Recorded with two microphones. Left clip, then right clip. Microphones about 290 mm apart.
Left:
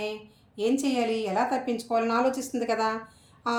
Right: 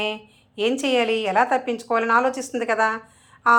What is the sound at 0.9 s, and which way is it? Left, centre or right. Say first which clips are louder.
Speech: right 7 dB; right.